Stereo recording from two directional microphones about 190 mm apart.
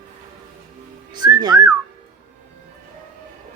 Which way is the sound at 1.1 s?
20° right (ahead or behind).